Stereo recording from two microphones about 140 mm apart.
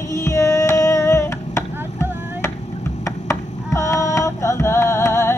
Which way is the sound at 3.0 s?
20° left (ahead or behind).